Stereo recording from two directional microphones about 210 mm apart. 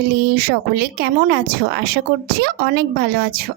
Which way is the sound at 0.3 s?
50° right (ahead or behind).